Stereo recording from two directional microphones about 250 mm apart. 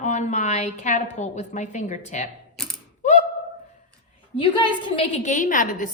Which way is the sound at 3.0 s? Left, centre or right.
Left.